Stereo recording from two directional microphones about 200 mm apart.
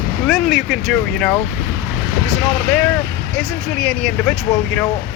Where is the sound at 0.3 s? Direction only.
Centre (ahead or behind).